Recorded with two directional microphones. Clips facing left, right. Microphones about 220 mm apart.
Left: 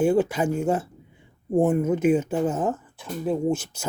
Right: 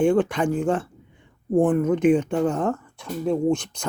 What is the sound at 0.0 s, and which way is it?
Speech, 5° left (ahead or behind).